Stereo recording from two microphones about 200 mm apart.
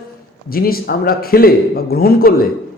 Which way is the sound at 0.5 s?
50° left (ahead or behind).